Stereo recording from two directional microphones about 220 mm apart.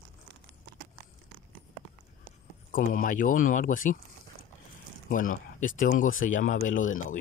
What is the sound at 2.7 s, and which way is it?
Speech, 35° left (ahead or behind).